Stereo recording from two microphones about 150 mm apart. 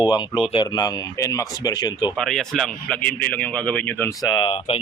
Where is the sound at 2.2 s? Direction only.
5° left (ahead or behind).